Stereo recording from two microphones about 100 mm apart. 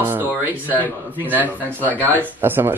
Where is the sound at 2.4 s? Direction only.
20° right (ahead or behind).